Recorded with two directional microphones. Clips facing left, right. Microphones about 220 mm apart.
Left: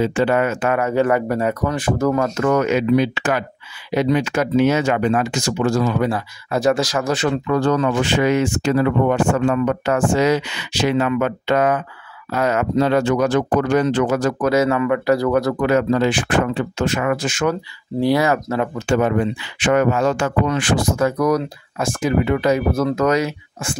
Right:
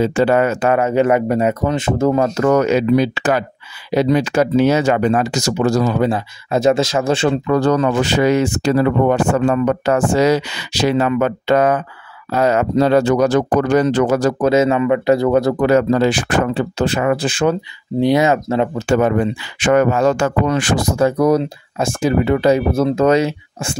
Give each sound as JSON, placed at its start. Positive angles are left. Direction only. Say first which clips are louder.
{"t": 0.0, "sound": "speech", "louder": "right 3 dB", "side_deg": -40}
{"t": 2.3, "sound": "speech", "louder": "right 3 dB", "side_deg": -35}
{"t": 5.9, "sound": "speech", "louder": "right 3 dB", "side_deg": -25}
{"t": 14.5, "sound": "speech", "louder": "right 2 dB", "side_deg": -25}
{"t": 17.6, "sound": "speech", "louder": "right 3 dB", "side_deg": -20}
{"t": 18.9, "sound": "speech", "louder": "right 2 dB", "side_deg": -45}